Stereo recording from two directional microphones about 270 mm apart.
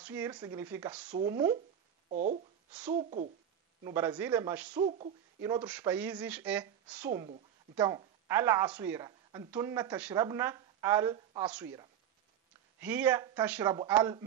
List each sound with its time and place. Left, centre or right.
0.0 s speech: centre
2.0 s speech: right
3.8 s speech: centre
4.7 s speech: right
7.2 s speech: right
7.8 s speech: centre
12.8 s speech: centre